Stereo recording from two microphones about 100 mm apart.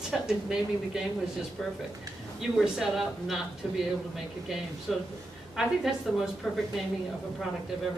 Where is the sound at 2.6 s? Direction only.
5° right (ahead or behind).